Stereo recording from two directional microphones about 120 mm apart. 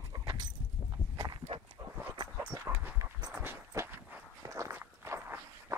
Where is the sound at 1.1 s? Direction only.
35° right (ahead or behind).